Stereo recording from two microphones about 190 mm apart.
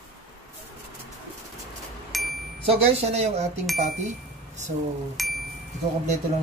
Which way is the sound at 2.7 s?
35° right (ahead or behind).